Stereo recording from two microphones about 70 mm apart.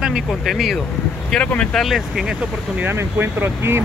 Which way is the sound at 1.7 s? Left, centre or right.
Centre.